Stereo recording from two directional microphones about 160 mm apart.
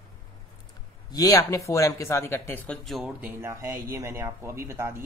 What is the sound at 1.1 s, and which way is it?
Speech, 20° left (ahead or behind).